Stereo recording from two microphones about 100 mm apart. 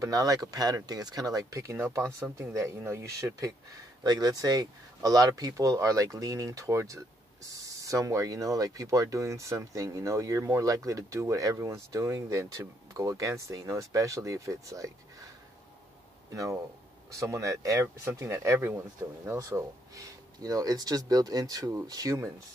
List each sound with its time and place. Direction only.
0.0 s speech: 35° right (ahead or behind)
17.1 s speech: 30° right (ahead or behind)
20.3 s speech: 40° right (ahead or behind)